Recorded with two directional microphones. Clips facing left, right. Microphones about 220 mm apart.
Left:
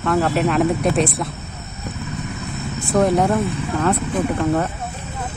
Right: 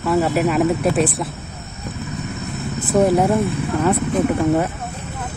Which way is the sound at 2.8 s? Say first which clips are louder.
Right 1 dB; 5° right (ahead or behind).